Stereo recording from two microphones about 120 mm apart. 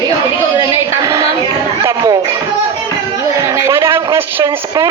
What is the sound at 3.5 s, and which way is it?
A man's voice, 25° right (ahead or behind).